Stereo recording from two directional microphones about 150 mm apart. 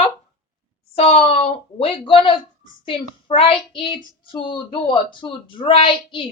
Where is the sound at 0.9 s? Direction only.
40° left (ahead or behind).